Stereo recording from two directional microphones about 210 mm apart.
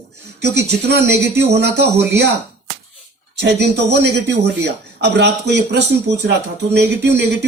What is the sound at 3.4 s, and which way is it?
A man's voice, 55° right (ahead or behind).